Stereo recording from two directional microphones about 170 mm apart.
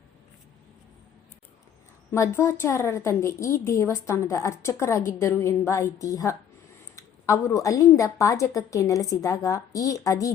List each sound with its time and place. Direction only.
2.1 s a woman's voice: 15° left (ahead or behind)